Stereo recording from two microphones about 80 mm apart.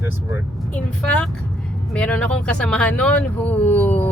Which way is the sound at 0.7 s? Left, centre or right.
Centre.